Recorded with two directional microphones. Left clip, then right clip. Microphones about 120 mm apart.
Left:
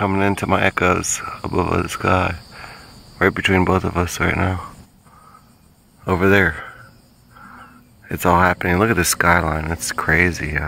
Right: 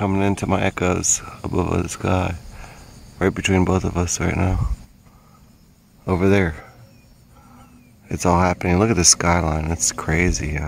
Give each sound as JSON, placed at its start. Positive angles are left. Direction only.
{"t": 0.0, "sound": "speech", "side_deg": -15}
{"t": 6.0, "sound": "speech", "side_deg": -15}
{"t": 8.1, "sound": "speech", "side_deg": -20}